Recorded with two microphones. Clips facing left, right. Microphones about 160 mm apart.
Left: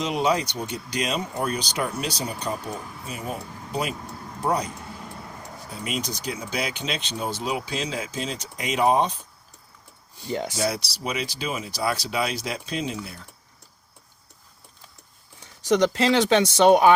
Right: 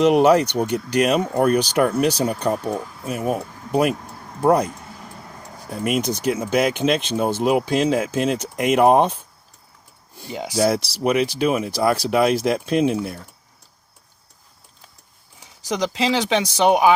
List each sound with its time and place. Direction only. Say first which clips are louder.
0.0 s speech: right 9 dB; 65° right (ahead or behind)
10.2 s speech: left 2 dB; 5° right (ahead or behind)
10.7 s speech: right 9 dB; 55° right (ahead or behind)
15.7 s speech: left 2 dB; centre (ahead or behind)